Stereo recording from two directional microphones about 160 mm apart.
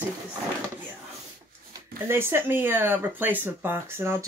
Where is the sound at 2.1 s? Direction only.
15° right (ahead or behind).